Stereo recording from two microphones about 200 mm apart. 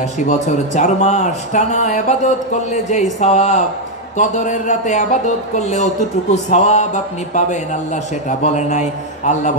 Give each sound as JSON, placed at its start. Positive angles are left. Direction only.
{"t": 0.2, "sound": "speech", "side_deg": 35}